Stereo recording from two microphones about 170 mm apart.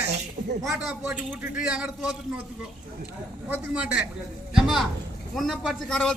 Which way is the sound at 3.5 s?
5° right (ahead or behind).